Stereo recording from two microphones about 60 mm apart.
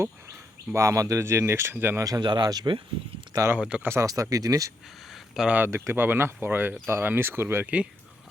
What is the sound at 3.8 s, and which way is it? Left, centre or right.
Speech, right.